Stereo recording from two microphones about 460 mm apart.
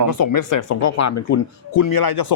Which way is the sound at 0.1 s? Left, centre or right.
Left.